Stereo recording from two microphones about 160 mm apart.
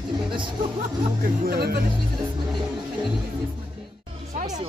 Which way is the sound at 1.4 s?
75° right (ahead or behind).